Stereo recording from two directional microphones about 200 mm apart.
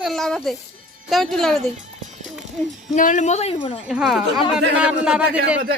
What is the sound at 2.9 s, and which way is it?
Speech, 40° left (ahead or behind).